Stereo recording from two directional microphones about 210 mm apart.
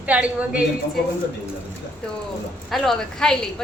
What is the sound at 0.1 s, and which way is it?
Speech, 5° right (ahead or behind).